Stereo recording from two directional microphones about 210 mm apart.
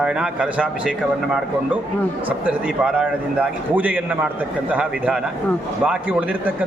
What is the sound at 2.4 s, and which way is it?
A man's voice, 5° right (ahead or behind).